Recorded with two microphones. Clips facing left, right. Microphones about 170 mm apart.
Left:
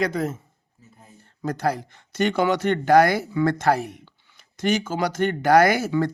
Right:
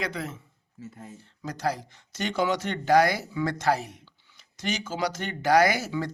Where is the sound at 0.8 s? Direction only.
90° right.